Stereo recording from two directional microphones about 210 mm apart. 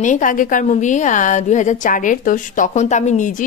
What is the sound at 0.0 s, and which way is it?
A woman's voice, 35° left (ahead or behind).